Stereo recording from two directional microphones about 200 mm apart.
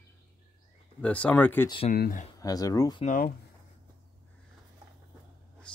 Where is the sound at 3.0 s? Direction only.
40° left (ahead or behind).